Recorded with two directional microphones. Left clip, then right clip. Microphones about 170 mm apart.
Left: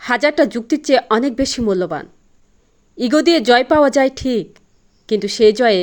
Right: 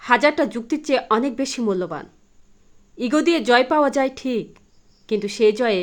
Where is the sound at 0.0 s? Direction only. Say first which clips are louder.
Left 2 dB; 25° left (ahead or behind).